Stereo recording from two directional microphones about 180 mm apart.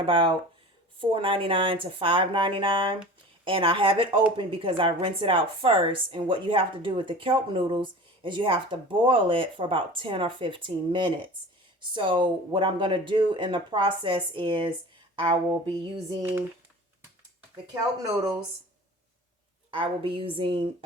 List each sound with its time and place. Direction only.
0.0 s a woman's voice: 25° right (ahead or behind)
19.7 s a woman's voice: 30° right (ahead or behind)